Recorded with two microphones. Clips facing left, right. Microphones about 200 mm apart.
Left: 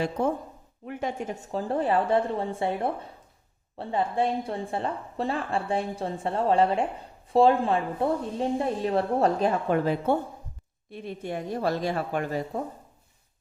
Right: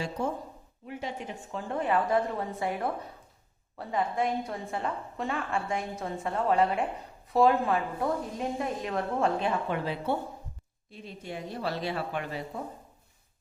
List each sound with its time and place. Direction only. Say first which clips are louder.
0.2 s a woman's voice: left 5 dB; 60° left (ahead or behind)
10.9 s speech: left 6 dB; 60° left (ahead or behind)